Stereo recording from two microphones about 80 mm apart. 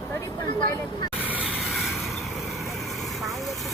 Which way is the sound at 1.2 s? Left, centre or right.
Centre.